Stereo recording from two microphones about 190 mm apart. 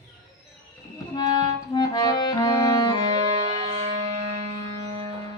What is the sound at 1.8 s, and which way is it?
Music, 20° left (ahead or behind).